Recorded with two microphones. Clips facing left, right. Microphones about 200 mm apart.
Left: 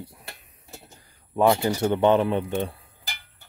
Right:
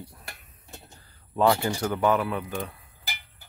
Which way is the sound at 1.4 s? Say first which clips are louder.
Left 2 dB; 20° left (ahead or behind).